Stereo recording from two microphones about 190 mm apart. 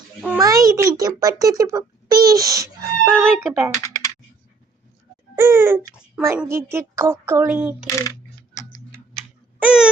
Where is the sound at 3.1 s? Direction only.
5° left (ahead or behind).